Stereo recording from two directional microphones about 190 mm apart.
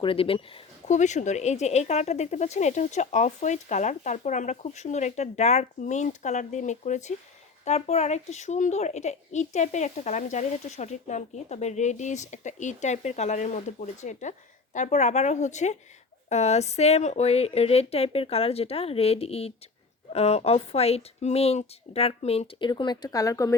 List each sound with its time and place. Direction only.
0.0 s speech: 30° left (ahead or behind)